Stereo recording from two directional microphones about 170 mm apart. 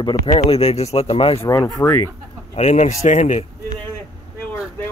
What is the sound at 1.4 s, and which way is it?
Speech, 20° left (ahead or behind).